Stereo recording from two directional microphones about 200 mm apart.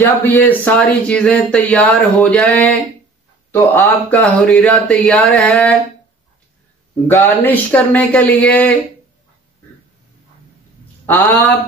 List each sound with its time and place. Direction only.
0.2 s speech: 10° left (ahead or behind)
7.1 s speech: 10° left (ahead or behind)
11.1 s speech: 10° left (ahead or behind)